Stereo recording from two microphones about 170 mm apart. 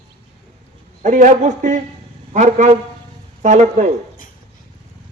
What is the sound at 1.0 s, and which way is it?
Speech, 45° right (ahead or behind).